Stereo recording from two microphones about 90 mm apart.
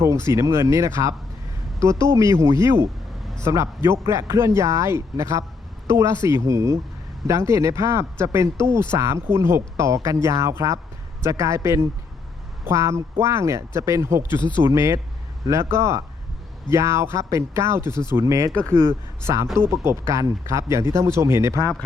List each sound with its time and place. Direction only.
0.0 s speech: 30° right (ahead or behind)
14.3 s speech: 60° left (ahead or behind)
14.7 s speech: 35° right (ahead or behind)